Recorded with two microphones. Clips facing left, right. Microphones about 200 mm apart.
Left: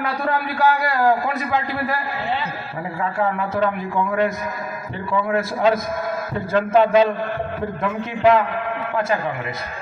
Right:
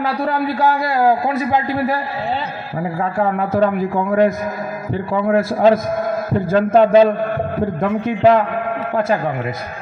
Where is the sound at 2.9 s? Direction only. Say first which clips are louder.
Right 3 dB; 40° right (ahead or behind).